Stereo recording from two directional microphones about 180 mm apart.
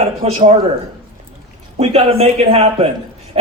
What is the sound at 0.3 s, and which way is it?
Speech, 35° right (ahead or behind).